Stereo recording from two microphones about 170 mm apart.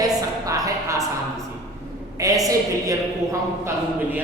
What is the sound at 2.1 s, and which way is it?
A woman's voice, 20° right (ahead or behind).